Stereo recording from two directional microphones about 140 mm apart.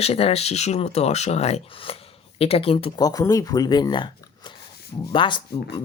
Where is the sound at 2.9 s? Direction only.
25° left (ahead or behind).